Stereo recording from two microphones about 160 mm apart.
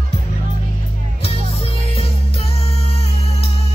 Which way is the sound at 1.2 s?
40° left (ahead or behind).